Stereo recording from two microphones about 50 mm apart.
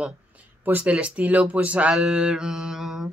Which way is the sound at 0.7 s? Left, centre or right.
Right.